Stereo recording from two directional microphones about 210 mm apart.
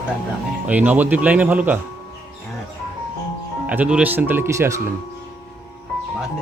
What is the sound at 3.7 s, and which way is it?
Speech, 5° right (ahead or behind).